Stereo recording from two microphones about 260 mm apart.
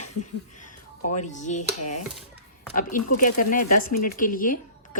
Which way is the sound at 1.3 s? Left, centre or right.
Left.